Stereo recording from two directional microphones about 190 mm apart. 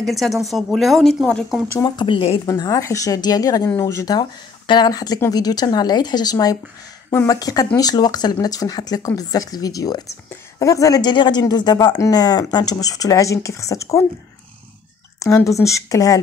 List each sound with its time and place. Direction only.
0.1 s a woman's voice: centre (ahead or behind)
1.8 s a woman's voice: 25° left (ahead or behind)
15.1 s speech: 15° left (ahead or behind)